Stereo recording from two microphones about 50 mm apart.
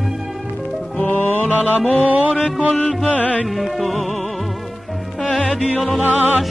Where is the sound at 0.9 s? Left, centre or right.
Left.